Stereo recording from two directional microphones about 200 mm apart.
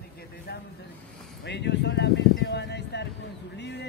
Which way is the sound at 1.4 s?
60° left (ahead or behind).